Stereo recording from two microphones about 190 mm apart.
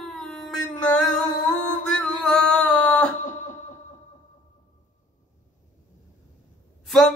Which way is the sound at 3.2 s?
40° left (ahead or behind).